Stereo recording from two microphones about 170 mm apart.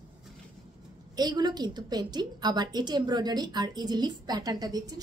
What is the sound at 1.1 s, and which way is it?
A woman's voice, 25° right (ahead or behind).